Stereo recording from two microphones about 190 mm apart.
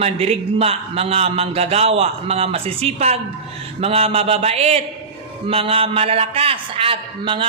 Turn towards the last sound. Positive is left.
turn(degrees=-25)  # may be behind; listen again after turning